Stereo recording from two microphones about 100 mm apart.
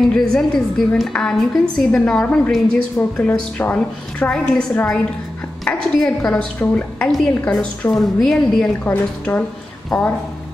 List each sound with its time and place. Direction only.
0.1 s a woman's voice: 5° left (ahead or behind)
3.3 s a woman's voice: 20° left (ahead or behind)
8.8 s a woman's voice: 15° left (ahead or behind)
9.9 s a woman's voice: 5° left (ahead or behind)